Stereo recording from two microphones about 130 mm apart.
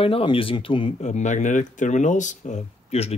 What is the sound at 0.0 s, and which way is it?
Speech, 45° left (ahead or behind).